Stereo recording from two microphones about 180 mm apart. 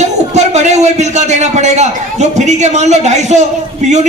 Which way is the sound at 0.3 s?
40° right (ahead or behind).